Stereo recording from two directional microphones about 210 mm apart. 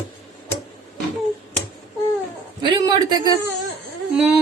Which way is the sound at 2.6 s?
20° right (ahead or behind).